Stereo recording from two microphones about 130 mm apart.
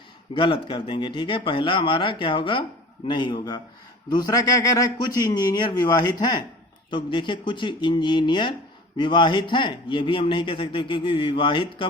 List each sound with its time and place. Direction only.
0.3 s a man's voice: 40° left (ahead or behind)